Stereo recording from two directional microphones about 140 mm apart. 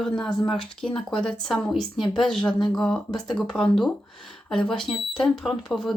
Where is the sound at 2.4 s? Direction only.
35° left (ahead or behind).